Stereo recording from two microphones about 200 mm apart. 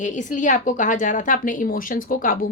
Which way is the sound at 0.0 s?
40° left (ahead or behind).